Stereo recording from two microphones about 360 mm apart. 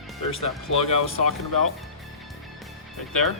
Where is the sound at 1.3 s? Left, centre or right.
Right.